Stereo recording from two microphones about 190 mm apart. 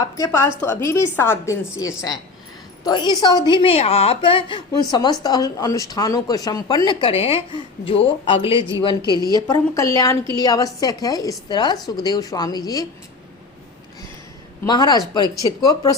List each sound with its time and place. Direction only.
0.0 s a woman's voice: 15° left (ahead or behind)
14.6 s a woman's voice: 20° left (ahead or behind)